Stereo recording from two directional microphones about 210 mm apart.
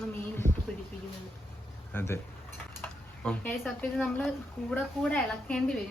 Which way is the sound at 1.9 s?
10° left (ahead or behind).